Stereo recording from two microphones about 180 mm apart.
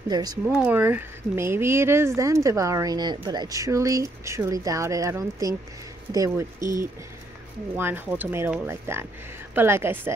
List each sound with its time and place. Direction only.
0.1 s speech: 20° right (ahead or behind)
0.6 s speech: 10° right (ahead or behind)
7.7 s speech: 10° right (ahead or behind)